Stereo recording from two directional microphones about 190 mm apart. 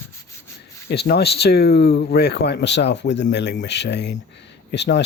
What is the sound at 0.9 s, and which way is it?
Speech, 60° left (ahead or behind).